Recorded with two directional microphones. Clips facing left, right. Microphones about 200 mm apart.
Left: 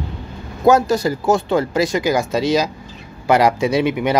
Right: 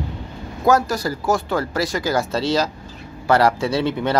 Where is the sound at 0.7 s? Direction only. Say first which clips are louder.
Left 4 dB; 25° left (ahead or behind).